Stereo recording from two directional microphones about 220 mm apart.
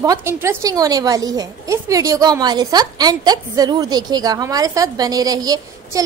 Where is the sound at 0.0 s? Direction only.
15° right (ahead or behind).